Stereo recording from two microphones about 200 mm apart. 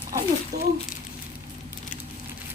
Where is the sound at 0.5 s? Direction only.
50° right (ahead or behind).